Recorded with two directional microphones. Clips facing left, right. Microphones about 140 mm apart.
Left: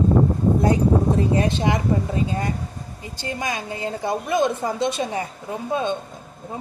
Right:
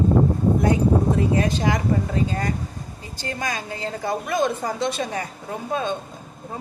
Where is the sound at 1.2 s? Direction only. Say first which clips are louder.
Left 1 dB; 25° left (ahead or behind).